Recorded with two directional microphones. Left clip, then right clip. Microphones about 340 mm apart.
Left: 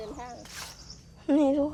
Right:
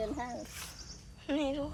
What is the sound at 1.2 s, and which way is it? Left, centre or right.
Speech, centre.